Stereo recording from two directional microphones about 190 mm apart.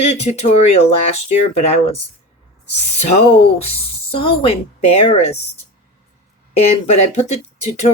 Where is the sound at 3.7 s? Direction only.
30° left (ahead or behind).